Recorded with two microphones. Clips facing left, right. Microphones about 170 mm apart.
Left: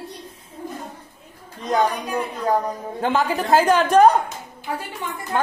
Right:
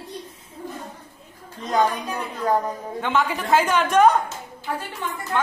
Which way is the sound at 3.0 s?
35° left (ahead or behind).